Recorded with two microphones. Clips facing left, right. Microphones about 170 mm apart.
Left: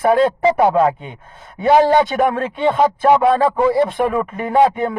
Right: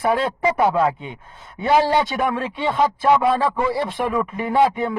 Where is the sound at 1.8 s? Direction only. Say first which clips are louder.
Left 6 dB; 50° left (ahead or behind).